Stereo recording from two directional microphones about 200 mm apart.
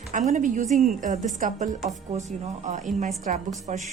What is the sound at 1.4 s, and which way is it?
Speech, 40° right (ahead or behind).